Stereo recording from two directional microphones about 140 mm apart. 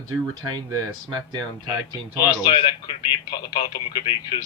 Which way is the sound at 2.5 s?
35° left (ahead or behind).